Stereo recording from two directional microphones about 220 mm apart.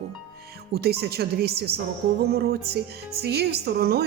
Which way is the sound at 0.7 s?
45° right (ahead or behind).